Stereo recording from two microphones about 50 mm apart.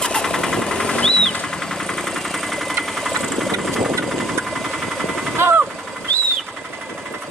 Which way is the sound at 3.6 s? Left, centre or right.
Centre.